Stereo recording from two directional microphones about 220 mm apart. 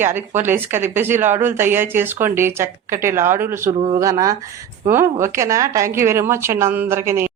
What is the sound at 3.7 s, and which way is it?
Speech, 25° right (ahead or behind).